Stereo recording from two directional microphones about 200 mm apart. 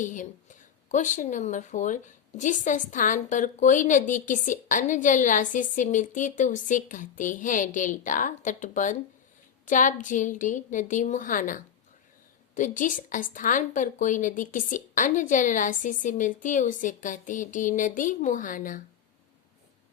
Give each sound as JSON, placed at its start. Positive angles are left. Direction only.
{"t": 0.0, "sound": "speech", "side_deg": 40}